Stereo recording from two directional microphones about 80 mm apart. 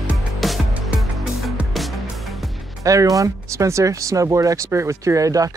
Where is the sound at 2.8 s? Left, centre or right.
Right.